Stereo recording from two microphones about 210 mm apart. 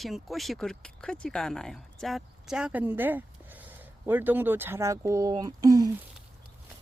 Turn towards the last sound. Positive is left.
turn(degrees=-15)  # may be behind; listen again after turning